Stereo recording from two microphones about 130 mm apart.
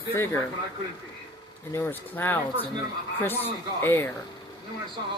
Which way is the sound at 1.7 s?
20° left (ahead or behind).